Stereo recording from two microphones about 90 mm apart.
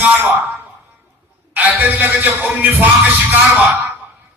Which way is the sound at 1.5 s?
20° right (ahead or behind).